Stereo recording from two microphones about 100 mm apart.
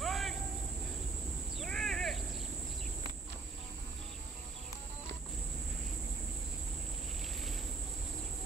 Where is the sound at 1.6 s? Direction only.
5° left (ahead or behind).